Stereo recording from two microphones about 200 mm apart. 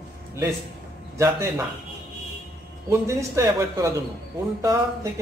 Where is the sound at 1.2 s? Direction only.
15° right (ahead or behind).